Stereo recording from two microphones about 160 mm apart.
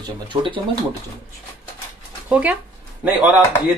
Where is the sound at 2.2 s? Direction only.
10° right (ahead or behind).